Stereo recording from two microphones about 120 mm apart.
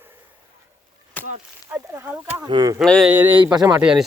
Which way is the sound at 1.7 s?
20° right (ahead or behind).